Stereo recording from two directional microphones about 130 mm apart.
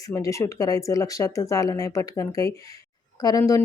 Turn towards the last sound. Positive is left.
turn(degrees=25)  # may be behind; listen again after turning